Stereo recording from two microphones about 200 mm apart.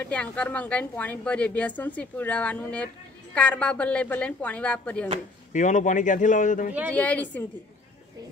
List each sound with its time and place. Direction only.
0.0 s a woman's voice: 5° left (ahead or behind)
5.5 s speech: 40° left (ahead or behind)
6.9 s a woman's voice: 5° left (ahead or behind)